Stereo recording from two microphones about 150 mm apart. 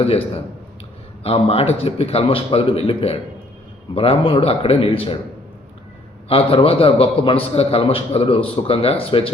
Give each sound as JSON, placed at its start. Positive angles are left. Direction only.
{"t": 1.2, "sound": "a man's voice", "side_deg": 40}
{"t": 6.2, "sound": "a man's voice", "side_deg": 40}